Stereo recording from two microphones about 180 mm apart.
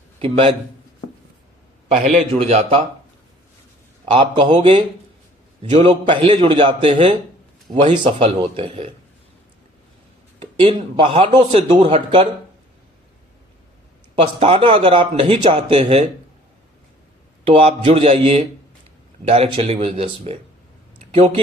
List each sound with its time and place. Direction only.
0.2 s speech: 30° right (ahead or behind)
2.1 s speech: 35° right (ahead or behind)
4.1 s a man's voice: 30° right (ahead or behind)
7.7 s speech: 40° right (ahead or behind)
8.0 s speech: 30° right (ahead or behind)
10.4 s a man's voice: 30° right (ahead or behind)
14.2 s speech: 35° right (ahead or behind)
17.4 s speech: 35° right (ahead or behind)